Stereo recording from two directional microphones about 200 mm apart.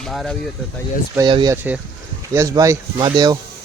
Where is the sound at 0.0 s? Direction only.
Centre (ahead or behind).